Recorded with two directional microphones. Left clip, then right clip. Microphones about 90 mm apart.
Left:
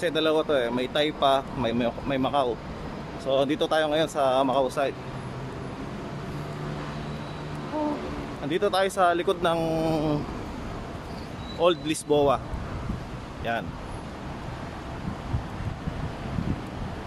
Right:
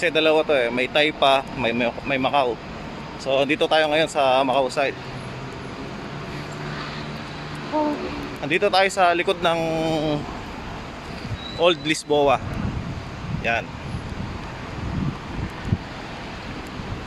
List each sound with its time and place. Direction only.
0.0 s speech: 10° left (ahead or behind)
8.5 s speech: 15° left (ahead or behind)
9.6 s mantra: 25° left (ahead or behind)
11.6 s speech: 10° left (ahead or behind)
13.4 s speech: 20° left (ahead or behind)